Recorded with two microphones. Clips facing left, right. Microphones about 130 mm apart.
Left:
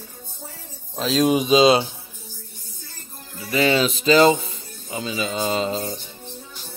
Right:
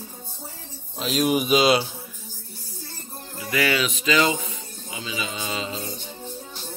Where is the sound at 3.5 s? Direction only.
25° left (ahead or behind).